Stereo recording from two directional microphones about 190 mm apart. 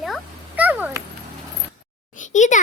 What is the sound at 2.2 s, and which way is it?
Speech, 40° left (ahead or behind).